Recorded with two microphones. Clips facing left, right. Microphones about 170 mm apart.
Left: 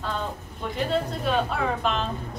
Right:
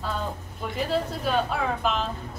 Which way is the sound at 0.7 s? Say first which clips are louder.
Left 1 dB; centre (ahead or behind).